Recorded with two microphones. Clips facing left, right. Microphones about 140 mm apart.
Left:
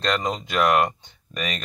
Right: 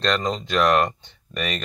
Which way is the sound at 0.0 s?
10° left (ahead or behind).